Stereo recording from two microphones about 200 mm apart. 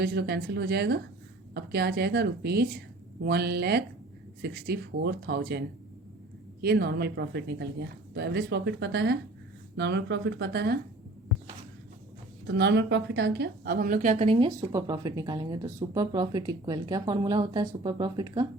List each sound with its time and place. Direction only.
0.0 s a woman's voice: 55° right (ahead or behind)
12.5 s a woman's voice: 60° right (ahead or behind); by 18.4 s 20° right (ahead or behind)